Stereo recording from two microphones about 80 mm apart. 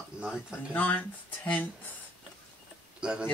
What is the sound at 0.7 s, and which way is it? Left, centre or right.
Speech, centre.